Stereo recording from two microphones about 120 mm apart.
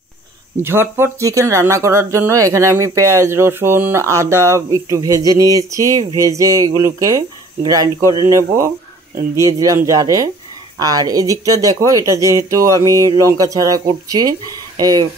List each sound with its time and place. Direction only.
0.6 s speech: 20° right (ahead or behind)